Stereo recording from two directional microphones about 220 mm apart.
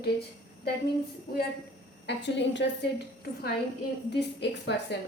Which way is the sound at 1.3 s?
45° left (ahead or behind).